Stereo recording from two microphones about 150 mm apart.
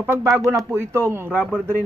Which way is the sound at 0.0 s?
15° right (ahead or behind).